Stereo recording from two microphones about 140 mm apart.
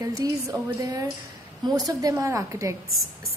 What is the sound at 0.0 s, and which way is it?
A woman's voice, 25° right (ahead or behind).